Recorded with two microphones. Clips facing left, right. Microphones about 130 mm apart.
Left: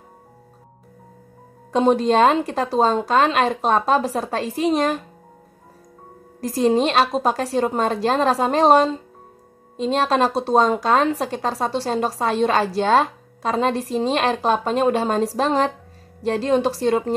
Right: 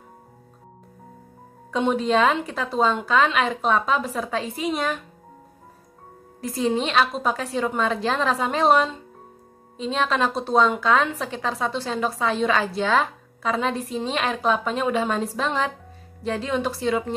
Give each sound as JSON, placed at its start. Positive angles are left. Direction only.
{"t": 1.8, "sound": "speech", "side_deg": 40}
{"t": 6.4, "sound": "speech", "side_deg": 40}